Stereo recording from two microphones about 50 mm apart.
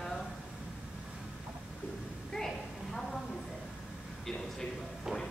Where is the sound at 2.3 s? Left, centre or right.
Centre.